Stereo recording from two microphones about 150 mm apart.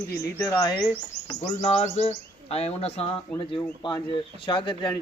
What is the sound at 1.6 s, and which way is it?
Bird, 45° left (ahead or behind).